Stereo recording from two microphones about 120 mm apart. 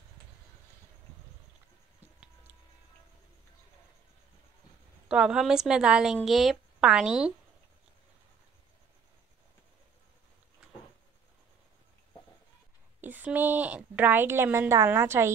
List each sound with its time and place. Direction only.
5.0 s a woman's voice: 10° right (ahead or behind)
13.0 s a woman's voice: 15° right (ahead or behind)